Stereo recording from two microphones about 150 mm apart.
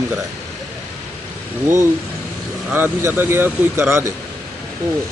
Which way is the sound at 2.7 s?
15° right (ahead or behind).